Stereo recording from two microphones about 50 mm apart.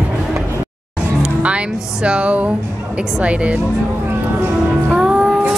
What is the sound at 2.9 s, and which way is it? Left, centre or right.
Speech, right.